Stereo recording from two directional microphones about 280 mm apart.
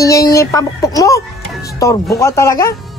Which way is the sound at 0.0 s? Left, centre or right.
Centre.